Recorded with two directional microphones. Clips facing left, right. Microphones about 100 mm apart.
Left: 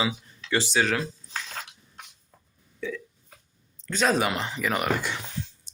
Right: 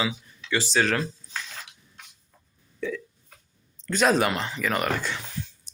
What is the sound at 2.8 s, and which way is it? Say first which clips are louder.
Hiccup: right 2 dB; centre (ahead or behind).